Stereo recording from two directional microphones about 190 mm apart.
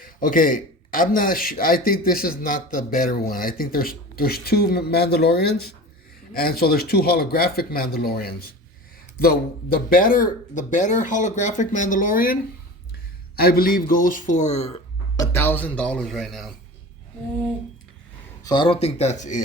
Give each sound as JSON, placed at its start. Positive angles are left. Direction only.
{"t": 0.0, "sound": "a man's voice", "side_deg": 45}
{"t": 15.1, "sound": "speech", "side_deg": 15}
{"t": 18.4, "sound": "speech", "side_deg": 25}